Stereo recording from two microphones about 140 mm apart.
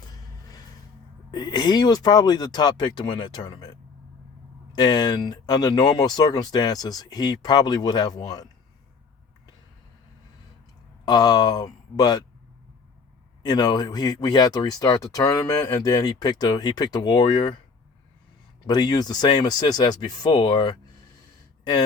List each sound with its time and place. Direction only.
0.1 s a sound: 25° left (ahead or behind)
1.3 s speech: 30° left (ahead or behind)
11.0 s speech: 30° left (ahead or behind)
13.4 s speech: 30° left (ahead or behind)
18.6 s speech: 30° left (ahead or behind)